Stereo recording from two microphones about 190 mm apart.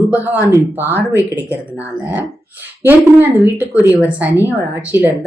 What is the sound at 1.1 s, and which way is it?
Speech, 15° left (ahead or behind).